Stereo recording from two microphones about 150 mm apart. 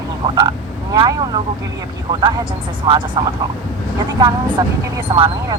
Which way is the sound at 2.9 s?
30° right (ahead or behind).